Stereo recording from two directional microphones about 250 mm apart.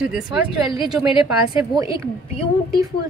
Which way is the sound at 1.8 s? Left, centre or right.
Left.